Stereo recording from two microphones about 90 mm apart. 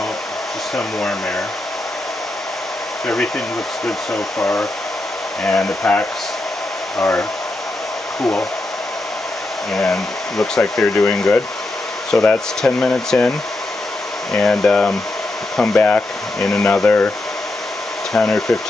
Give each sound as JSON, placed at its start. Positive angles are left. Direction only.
{"t": 0.7, "sound": "speech", "side_deg": 5}
{"t": 5.4, "sound": "speech", "side_deg": 10}
{"t": 9.8, "sound": "speech", "side_deg": 5}
{"t": 14.3, "sound": "speech", "side_deg": 10}
{"t": 18.1, "sound": "speech", "side_deg": 10}